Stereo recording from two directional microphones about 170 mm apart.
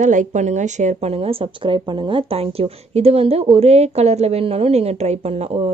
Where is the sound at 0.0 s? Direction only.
50° right (ahead or behind).